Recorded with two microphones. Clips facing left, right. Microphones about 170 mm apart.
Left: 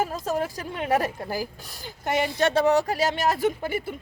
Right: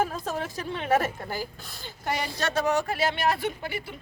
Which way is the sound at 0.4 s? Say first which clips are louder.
Left 1 dB; 10° left (ahead or behind).